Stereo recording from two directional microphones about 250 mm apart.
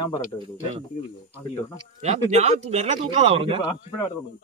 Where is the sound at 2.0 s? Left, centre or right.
Right.